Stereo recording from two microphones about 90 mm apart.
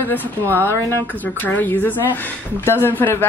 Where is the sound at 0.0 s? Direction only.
25° left (ahead or behind).